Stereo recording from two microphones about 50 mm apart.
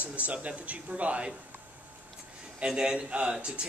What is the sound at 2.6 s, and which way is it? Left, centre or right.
Speech, centre.